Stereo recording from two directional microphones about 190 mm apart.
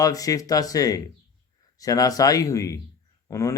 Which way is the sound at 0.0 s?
20° left (ahead or behind).